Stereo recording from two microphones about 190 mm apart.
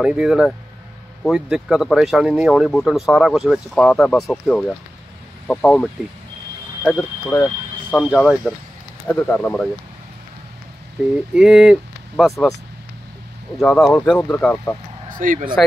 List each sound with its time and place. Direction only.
0.0 s speech: 5° right (ahead or behind)
11.3 s speech: 5° right (ahead or behind)
13.6 s speech: centre (ahead or behind)
15.1 s speech: 45° right (ahead or behind)